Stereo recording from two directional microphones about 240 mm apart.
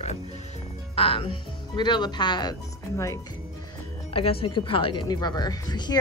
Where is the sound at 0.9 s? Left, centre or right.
Left.